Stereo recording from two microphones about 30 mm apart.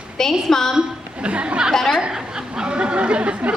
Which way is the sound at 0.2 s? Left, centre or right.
Centre.